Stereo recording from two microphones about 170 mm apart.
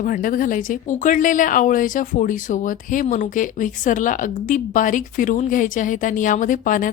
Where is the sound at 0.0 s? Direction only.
55° left (ahead or behind).